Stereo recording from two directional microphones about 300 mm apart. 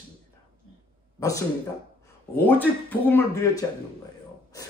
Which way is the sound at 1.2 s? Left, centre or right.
Centre.